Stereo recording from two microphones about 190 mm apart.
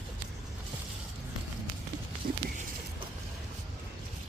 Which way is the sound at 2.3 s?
50° right (ahead or behind).